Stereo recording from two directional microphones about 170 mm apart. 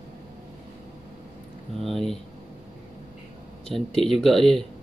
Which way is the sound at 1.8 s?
Centre (ahead or behind).